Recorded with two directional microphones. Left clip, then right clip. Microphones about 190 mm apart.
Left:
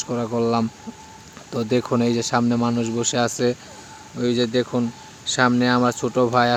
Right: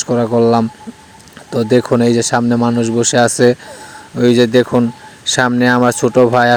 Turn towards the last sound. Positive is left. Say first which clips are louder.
# right 8 dB
turn(degrees=-30)  # may be behind; listen again after turning